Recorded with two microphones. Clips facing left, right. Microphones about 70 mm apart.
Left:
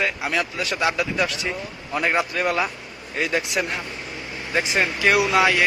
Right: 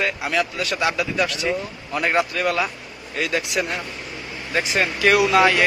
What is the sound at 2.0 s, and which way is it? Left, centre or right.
Speech, centre.